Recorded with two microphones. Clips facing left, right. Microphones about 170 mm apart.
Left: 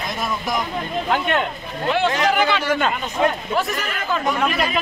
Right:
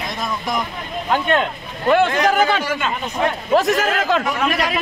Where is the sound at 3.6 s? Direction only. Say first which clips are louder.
Right 7 dB; 90° right.